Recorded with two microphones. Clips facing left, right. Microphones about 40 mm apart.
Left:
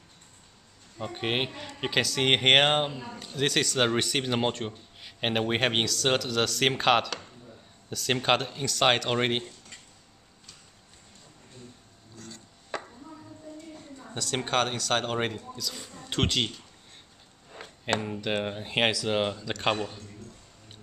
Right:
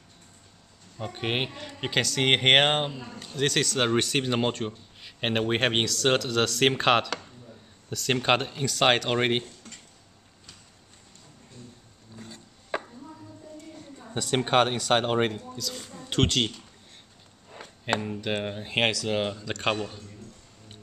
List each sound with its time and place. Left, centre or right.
0.9 s speech: centre
12.2 s chopping: centre
14.1 s speech: centre
15.2 s speech: centre
18.0 s speech: centre